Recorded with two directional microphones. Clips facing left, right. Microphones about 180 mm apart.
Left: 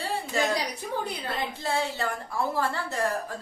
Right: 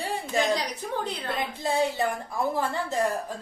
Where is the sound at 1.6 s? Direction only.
15° right (ahead or behind).